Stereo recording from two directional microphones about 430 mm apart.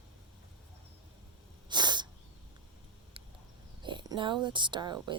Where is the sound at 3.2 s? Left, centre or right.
Centre.